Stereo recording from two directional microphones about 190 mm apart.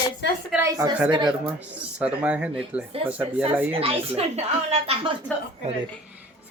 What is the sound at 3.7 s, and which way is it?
A woman's voice, 30° right (ahead or behind).